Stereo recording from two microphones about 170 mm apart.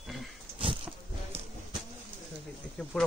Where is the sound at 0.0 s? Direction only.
Centre (ahead or behind).